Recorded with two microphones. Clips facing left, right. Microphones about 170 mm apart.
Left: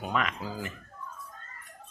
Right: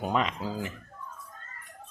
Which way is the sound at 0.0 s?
30° right (ahead or behind).